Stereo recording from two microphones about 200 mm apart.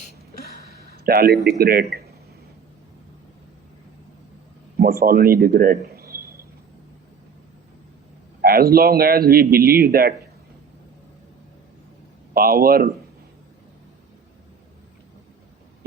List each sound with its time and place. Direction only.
0.9 s a sound: 50° right (ahead or behind)
1.5 s speech: 50° right (ahead or behind)
4.8 s a man's voice: 50° right (ahead or behind)
8.4 s speech: 50° right (ahead or behind)
12.3 s speech: 50° right (ahead or behind)